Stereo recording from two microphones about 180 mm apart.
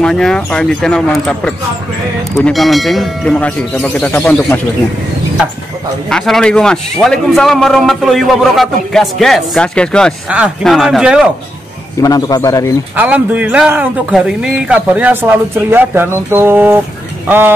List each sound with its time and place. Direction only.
0.0 s a man's voice: 5° left (ahead or behind)
6.0 s a man's voice: centre (ahead or behind)
12.0 s a man's voice: 20° left (ahead or behind)
12.9 s speech: 10° right (ahead or behind)